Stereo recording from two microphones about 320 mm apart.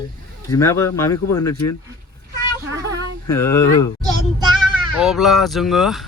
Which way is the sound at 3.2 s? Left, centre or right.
Centre.